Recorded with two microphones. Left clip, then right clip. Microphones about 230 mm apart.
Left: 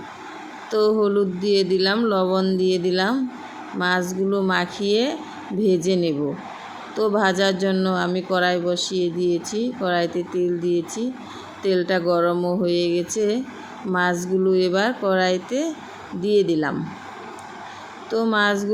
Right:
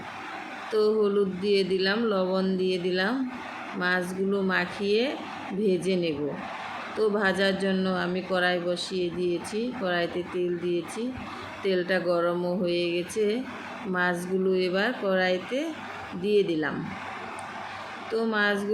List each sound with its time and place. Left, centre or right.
0.7 s speech: left
18.1 s speech: left